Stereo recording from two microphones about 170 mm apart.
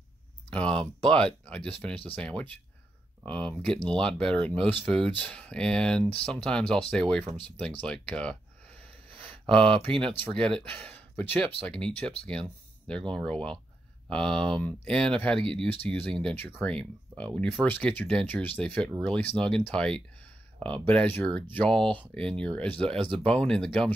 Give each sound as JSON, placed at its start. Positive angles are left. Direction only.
{"t": 1.1, "sound": "speech", "side_deg": 5}
{"t": 7.8, "sound": "a sound", "side_deg": 5}
{"t": 9.5, "sound": "speech", "side_deg": -30}
{"t": 9.9, "sound": "speech", "side_deg": 5}